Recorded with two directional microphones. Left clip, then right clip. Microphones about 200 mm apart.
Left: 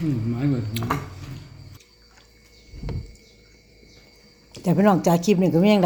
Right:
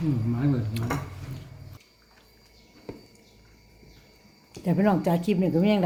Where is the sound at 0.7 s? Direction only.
10° left (ahead or behind).